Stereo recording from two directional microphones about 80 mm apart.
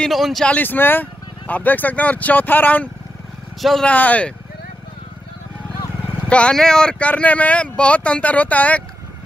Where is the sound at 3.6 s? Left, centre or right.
Centre.